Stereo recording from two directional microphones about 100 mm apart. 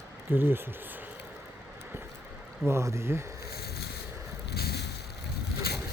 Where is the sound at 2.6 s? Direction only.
30° right (ahead or behind).